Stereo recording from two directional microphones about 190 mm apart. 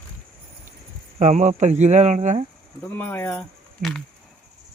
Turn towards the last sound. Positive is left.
turn(degrees=0)  # may be behind; listen again after turning